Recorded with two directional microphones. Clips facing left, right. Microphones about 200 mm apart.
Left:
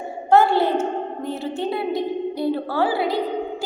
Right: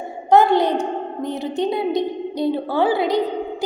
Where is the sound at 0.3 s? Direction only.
20° right (ahead or behind).